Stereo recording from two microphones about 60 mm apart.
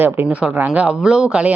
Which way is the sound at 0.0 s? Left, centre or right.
Right.